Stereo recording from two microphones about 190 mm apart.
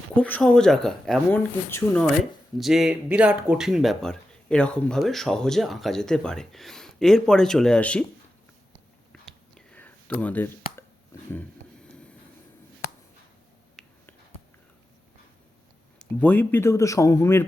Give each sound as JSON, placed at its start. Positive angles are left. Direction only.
{"t": 0.2, "sound": "speech", "side_deg": 5}
{"t": 2.6, "sound": "speech", "side_deg": 0}
{"t": 9.2, "sound": "whispering", "side_deg": 5}
{"t": 10.2, "sound": "speech", "side_deg": 10}
{"t": 11.1, "sound": "a sound", "side_deg": 15}
{"t": 13.8, "sound": "finger snapping", "side_deg": 0}
{"t": 16.0, "sound": "speech", "side_deg": 10}